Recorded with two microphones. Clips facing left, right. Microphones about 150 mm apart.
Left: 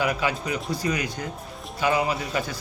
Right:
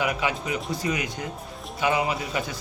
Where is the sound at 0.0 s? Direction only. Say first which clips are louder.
Left 1 dB; 20° right (ahead or behind).